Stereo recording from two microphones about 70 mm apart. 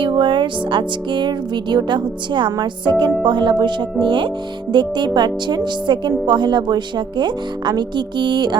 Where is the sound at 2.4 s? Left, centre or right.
Right.